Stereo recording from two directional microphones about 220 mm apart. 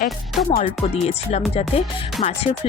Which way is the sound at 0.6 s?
25° left (ahead or behind).